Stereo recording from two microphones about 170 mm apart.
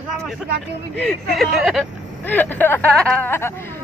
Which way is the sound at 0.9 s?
5° left (ahead or behind).